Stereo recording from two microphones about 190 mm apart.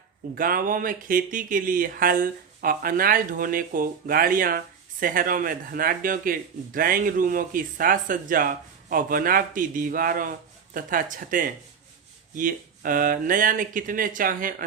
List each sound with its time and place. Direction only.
0.3 s speech: 45° right (ahead or behind)